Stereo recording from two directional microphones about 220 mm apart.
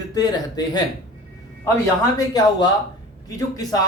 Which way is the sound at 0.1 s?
15° left (ahead or behind).